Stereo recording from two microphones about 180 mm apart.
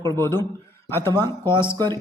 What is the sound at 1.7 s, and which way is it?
Speech, 20° right (ahead or behind).